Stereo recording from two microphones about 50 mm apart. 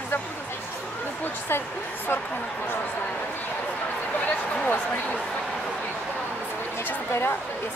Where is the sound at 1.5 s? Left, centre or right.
Left.